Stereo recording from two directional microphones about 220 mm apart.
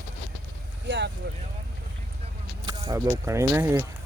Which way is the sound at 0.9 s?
55° right (ahead or behind).